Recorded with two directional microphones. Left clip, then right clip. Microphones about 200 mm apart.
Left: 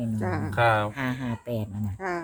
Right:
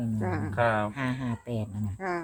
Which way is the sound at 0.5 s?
55° left (ahead or behind).